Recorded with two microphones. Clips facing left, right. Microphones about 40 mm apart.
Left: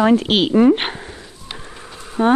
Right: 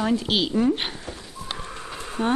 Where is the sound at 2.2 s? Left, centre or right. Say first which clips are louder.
Left 8 dB; left.